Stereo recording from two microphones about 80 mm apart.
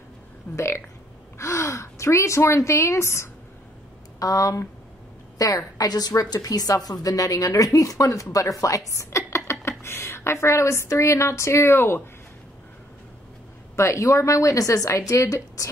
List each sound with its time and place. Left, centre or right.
0.6 s a woman's voice: left
4.2 s a woman's voice: left
13.7 s a woman's voice: left